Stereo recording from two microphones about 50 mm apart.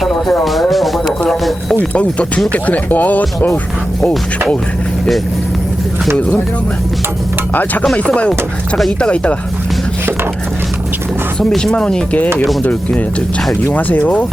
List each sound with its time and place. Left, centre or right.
0.0 s speech: centre
1.8 s speech: left
7.5 s speech: left
8.0 s speech: left
11.3 s speech: centre
12.6 s speech: left